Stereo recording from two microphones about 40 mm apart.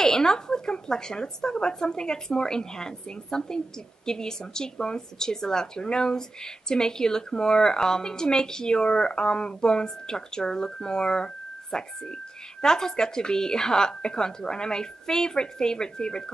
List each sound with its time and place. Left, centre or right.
0.0 s speech: centre